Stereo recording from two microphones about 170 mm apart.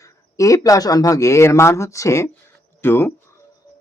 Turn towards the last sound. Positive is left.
turn(degrees=15)  # may be behind; listen again after turning